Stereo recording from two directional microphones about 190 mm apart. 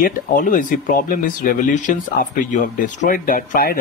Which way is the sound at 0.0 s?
45° left (ahead or behind).